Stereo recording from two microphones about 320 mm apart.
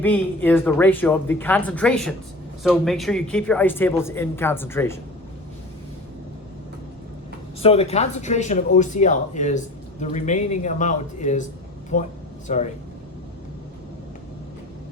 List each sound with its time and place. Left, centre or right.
0.0 s speech: centre
7.6 s speech: centre